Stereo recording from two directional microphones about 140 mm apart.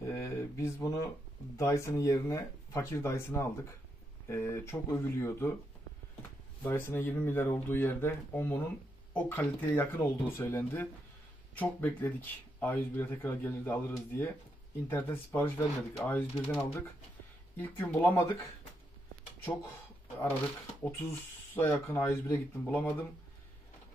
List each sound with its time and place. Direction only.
0.0 s a sound: 20° left (ahead or behind)
1.6 s speech: 20° left (ahead or behind)
6.6 s speech: 15° left (ahead or behind)
21.5 s speech: 15° left (ahead or behind)